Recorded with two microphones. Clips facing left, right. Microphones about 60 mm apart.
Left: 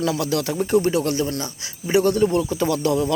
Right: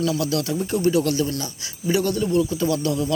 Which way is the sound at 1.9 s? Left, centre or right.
Left.